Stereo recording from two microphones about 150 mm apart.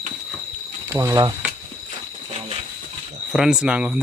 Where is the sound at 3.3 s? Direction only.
5° right (ahead or behind).